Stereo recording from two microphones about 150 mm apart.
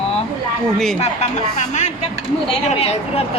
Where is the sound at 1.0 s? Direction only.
50° left (ahead or behind).